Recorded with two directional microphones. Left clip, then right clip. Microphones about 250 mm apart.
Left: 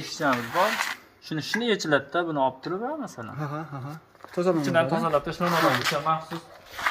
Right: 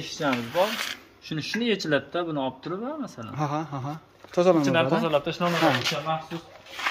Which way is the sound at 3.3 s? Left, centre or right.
Centre.